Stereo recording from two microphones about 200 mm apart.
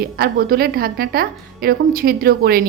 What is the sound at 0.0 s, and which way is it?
Speech, 50° right (ahead or behind).